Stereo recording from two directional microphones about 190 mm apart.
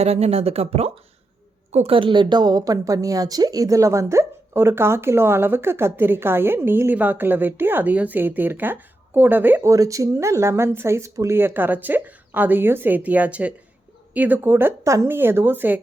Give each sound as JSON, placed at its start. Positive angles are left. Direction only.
{"t": 0.0, "sound": "a woman's voice", "side_deg": -35}